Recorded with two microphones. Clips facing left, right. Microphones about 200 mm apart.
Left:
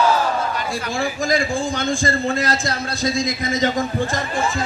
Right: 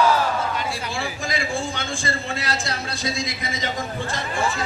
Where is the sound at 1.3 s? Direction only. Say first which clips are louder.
Left 5 dB; 40° left (ahead or behind).